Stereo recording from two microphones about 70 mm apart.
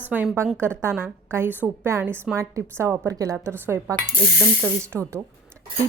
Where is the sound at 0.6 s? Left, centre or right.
Right.